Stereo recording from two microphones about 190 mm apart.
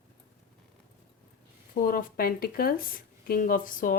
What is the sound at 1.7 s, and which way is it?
Speech, 50° left (ahead or behind).